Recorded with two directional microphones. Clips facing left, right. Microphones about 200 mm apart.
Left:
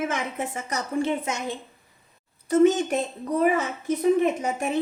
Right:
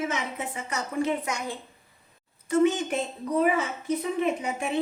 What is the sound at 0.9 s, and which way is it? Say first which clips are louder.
Speech: left 2 dB; 25° left (ahead or behind).